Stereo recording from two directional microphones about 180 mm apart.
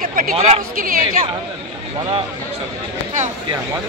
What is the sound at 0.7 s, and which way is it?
Speech, 50° right (ahead or behind).